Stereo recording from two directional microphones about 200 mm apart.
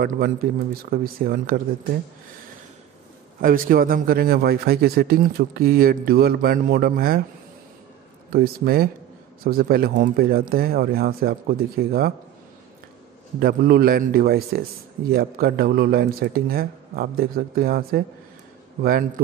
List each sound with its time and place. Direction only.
0.8 s a man's voice: 45° right (ahead or behind)
3.3 s a man's voice: 45° right (ahead or behind)
8.3 s a man's voice: 50° right (ahead or behind)
13.4 s a man's voice: 50° right (ahead or behind)